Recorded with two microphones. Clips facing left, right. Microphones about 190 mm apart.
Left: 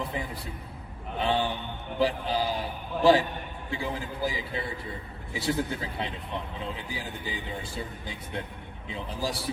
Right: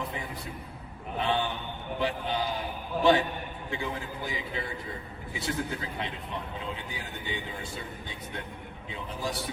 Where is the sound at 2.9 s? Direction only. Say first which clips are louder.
Left 2 dB; centre (ahead or behind).